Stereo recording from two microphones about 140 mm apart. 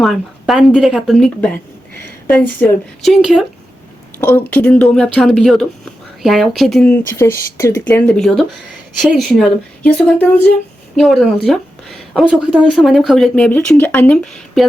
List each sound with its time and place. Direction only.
0.0 s a woman's voice: centre (ahead or behind); by 2.6 s 15° left (ahead or behind)
3.0 s a woman's voice: centre (ahead or behind)
4.2 s a woman's voice: 15° left (ahead or behind)
7.2 s speech: 20° left (ahead or behind)
10.9 s a woman's voice: centre (ahead or behind)